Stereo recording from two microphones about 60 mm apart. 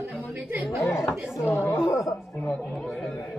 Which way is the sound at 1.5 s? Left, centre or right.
Left.